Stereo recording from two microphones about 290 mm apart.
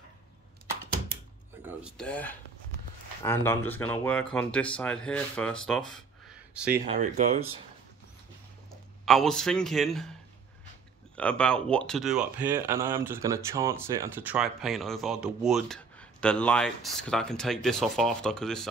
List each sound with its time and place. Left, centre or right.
1.7 s speech: centre
6.8 s speech: right
9.0 s speech: centre
11.1 s speech: centre